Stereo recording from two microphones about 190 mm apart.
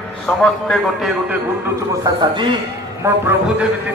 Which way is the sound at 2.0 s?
25° right (ahead or behind).